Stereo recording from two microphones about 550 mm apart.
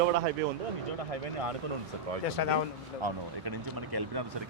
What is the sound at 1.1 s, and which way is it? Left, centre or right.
Speech, right.